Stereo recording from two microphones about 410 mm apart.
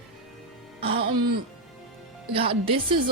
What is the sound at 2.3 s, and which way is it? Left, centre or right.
Speech, centre.